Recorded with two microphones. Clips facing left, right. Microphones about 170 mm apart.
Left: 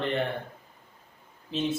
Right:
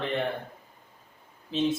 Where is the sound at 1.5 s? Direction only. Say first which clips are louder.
Right 3 dB; centre (ahead or behind).